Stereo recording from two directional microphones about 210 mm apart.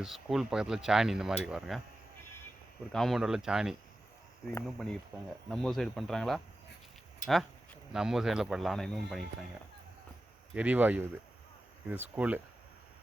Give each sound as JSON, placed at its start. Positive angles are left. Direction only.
{"t": 0.0, "sound": "speech", "side_deg": 0}
{"t": 2.9, "sound": "speech", "side_deg": 0}
{"t": 7.9, "sound": "speech", "side_deg": 0}
{"t": 10.5, "sound": "speech", "side_deg": -5}